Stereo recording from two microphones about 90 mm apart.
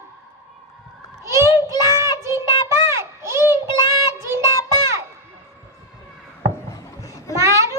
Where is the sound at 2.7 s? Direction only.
30° right (ahead or behind).